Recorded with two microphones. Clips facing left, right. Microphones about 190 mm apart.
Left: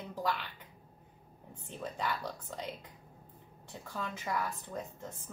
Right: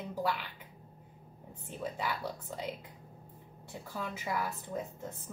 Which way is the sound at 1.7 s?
5° right (ahead or behind).